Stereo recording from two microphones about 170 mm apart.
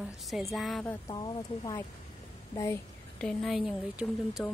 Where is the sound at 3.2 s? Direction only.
5° left (ahead or behind).